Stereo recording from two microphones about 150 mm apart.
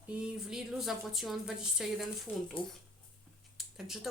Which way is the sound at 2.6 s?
35° left (ahead or behind).